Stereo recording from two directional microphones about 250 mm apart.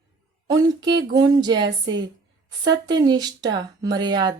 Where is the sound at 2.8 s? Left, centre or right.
Centre.